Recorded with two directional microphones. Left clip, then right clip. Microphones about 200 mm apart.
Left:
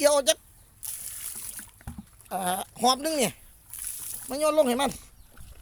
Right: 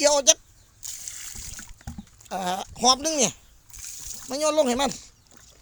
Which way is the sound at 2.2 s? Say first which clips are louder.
Right 1 dB; 15° right (ahead or behind).